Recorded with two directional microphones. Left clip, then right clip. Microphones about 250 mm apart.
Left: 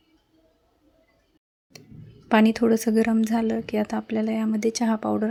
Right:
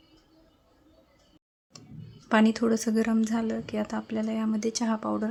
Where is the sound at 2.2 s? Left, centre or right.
Centre.